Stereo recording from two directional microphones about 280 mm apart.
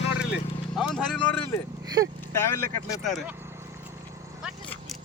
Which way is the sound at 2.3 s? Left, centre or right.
Centre.